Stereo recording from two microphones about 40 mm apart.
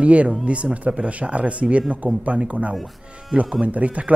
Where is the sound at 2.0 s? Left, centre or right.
Right.